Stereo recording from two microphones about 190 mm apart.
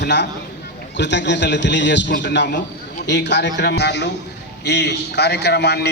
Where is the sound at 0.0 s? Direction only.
65° left (ahead or behind).